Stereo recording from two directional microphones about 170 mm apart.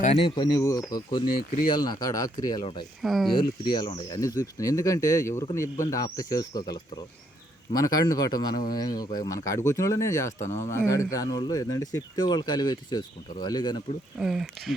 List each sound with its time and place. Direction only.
0.0 s speech: 35° left (ahead or behind)
1.4 s speech: 60° left (ahead or behind)
1.6 s speech: 25° left (ahead or behind)
3.0 s speech: centre (ahead or behind)
3.6 s speech: 25° left (ahead or behind)
14.2 s speech: 5° right (ahead or behind)